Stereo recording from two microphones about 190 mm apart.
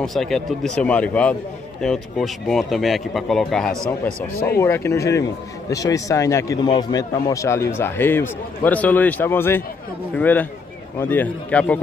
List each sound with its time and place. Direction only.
0.0 s a man's voice: centre (ahead or behind)
4.3 s speech: 50° left (ahead or behind)
4.6 s a man's voice: 15° left (ahead or behind)